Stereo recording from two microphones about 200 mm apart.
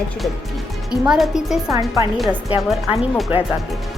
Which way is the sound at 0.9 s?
Centre (ahead or behind).